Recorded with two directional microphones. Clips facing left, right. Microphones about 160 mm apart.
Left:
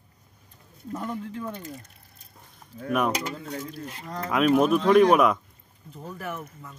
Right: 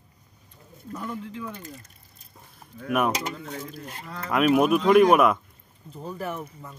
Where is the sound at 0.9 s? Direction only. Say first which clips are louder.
Left 2 dB; 45° left (ahead or behind).